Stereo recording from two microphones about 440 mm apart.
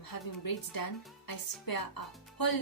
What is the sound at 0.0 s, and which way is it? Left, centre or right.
Speech, left.